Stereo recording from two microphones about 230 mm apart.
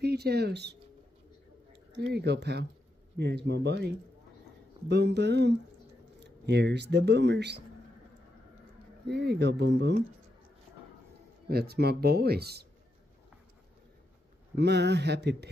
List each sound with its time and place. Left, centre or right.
0.0 s speech: right
2.0 s speech: right
9.0 s speech: right
11.4 s speech: right
14.5 s speech: right